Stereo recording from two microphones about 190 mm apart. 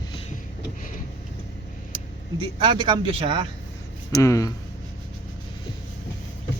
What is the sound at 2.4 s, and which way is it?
Speech, 25° right (ahead or behind).